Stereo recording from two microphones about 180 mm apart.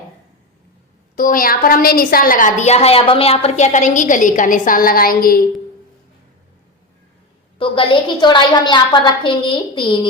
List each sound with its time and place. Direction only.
1.1 s a woman's voice: 50° left (ahead or behind)
7.6 s a woman's voice: 30° left (ahead or behind)